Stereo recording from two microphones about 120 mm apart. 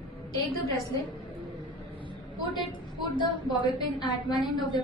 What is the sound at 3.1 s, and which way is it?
A woman's voice, 40° left (ahead or behind).